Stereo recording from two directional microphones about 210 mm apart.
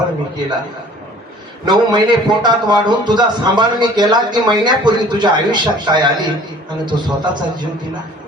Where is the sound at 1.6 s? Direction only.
20° right (ahead or behind).